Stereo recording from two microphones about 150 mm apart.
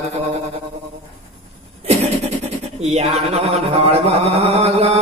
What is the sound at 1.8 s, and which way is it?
Vehicle, 45° right (ahead or behind).